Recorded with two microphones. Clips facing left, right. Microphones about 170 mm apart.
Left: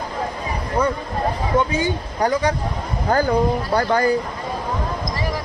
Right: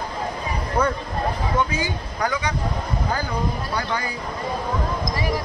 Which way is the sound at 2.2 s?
45° left (ahead or behind).